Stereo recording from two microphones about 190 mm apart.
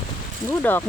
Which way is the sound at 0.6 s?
10° left (ahead or behind).